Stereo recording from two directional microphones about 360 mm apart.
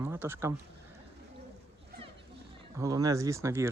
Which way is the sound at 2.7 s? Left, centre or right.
Centre.